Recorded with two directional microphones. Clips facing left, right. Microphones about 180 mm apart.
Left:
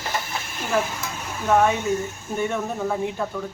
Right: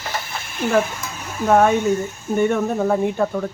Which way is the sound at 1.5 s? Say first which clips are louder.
Right 4 dB; 50° right (ahead or behind).